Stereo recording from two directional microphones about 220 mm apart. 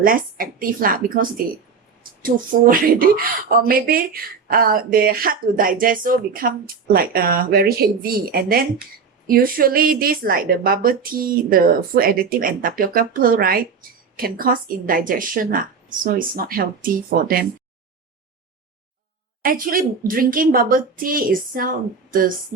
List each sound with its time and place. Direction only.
0.0 s speech: 40° right (ahead or behind)
19.4 s speech: 40° right (ahead or behind)